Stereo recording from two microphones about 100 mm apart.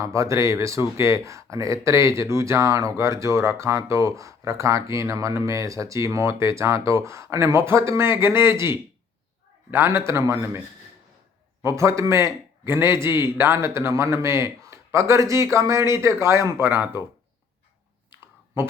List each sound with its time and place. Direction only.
0.0 s speech: 30° right (ahead or behind)
11.6 s speech: 30° right (ahead or behind)
18.5 s speech: 25° right (ahead or behind)